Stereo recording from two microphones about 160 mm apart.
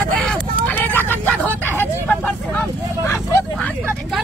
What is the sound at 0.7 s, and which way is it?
Vehicle, 10° left (ahead or behind).